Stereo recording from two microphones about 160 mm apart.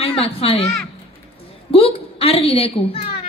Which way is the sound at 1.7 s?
35° left (ahead or behind).